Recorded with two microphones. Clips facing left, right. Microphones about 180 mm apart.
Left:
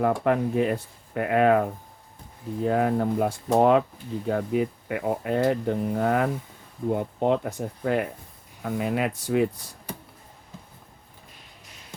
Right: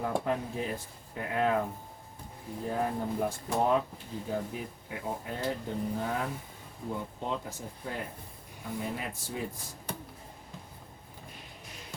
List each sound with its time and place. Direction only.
0.0 s speech: 70° left (ahead or behind)